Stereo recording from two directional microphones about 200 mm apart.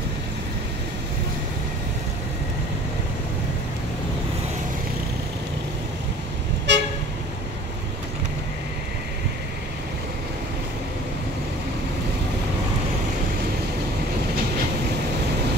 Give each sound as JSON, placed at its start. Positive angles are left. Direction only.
{"t": 6.7, "sound": "toot", "side_deg": -60}